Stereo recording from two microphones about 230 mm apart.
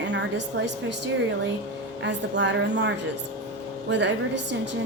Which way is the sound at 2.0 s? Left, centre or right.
Right.